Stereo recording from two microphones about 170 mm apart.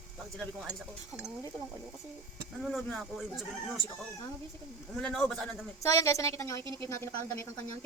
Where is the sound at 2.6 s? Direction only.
Centre (ahead or behind).